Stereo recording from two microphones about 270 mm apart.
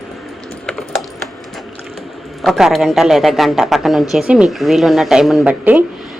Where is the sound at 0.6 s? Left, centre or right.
Centre.